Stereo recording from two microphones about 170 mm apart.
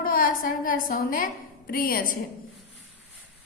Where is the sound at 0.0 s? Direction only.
55° left (ahead or behind).